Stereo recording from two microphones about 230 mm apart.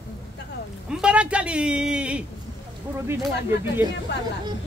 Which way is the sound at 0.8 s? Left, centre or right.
Centre.